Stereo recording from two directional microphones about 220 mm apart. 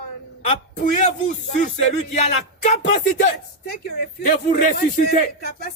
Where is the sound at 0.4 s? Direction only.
35° left (ahead or behind).